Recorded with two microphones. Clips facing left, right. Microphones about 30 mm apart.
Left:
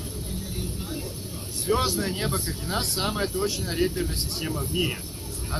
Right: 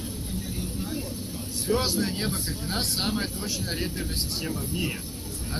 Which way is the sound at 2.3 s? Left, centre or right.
Left.